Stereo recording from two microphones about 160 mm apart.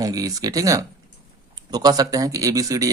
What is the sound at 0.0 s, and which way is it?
Speech, 20° right (ahead or behind).